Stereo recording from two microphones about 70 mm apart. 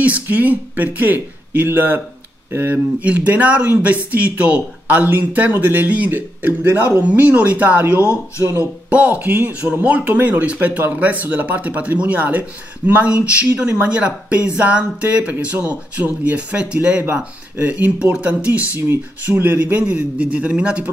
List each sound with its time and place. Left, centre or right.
0.0 s speech: right
19.2 s speech: right